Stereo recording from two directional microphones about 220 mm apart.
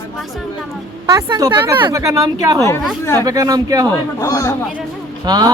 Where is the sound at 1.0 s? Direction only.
15° right (ahead or behind).